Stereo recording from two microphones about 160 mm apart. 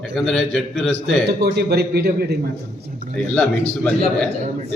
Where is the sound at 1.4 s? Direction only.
80° right.